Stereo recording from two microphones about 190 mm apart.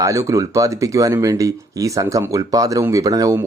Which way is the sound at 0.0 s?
15° right (ahead or behind).